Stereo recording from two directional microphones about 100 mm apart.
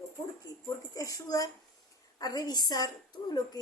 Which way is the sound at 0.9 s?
35° left (ahead or behind).